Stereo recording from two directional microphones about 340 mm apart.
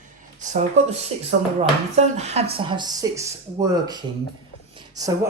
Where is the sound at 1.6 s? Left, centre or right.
Centre.